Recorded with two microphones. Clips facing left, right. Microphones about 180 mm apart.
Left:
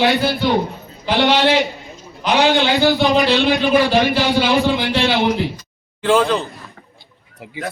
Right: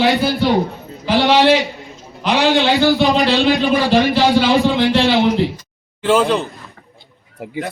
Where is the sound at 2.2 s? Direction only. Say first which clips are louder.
Even; centre (ahead or behind).